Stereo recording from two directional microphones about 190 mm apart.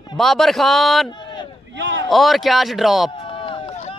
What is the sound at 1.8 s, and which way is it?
Speech, 70° right (ahead or behind).